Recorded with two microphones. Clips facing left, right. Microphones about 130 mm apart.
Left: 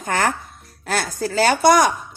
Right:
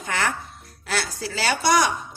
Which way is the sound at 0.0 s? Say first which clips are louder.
Left 5 dB; 45° left (ahead or behind).